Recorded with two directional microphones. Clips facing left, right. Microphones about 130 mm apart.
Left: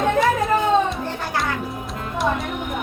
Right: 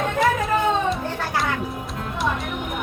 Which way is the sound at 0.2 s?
Centre (ahead or behind).